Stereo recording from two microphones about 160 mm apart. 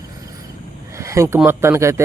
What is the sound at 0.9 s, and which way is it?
Speech, 20° right (ahead or behind).